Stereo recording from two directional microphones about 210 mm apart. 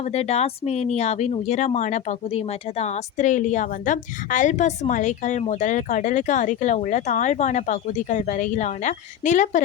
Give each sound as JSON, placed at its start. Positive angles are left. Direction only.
{"t": 0.0, "sound": "speech", "side_deg": 30}